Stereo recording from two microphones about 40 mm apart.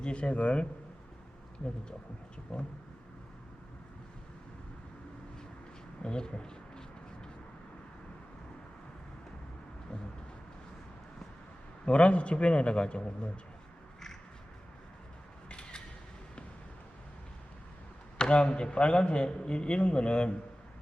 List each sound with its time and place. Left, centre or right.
0.0 s a man's voice: left
2.5 s a man's voice: left
6.0 s a sound: left
11.9 s a man's voice: left
15.4 s a sound: left
18.2 s a man's voice: left